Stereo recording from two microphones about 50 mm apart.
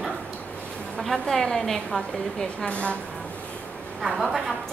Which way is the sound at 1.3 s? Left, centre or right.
Centre.